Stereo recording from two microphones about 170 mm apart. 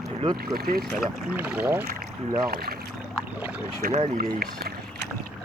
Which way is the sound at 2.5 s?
65° right (ahead or behind).